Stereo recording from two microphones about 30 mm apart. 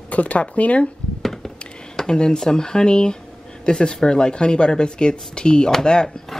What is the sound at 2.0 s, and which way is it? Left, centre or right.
Speech, left.